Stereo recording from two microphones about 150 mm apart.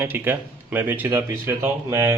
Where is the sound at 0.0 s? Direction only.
15° right (ahead or behind).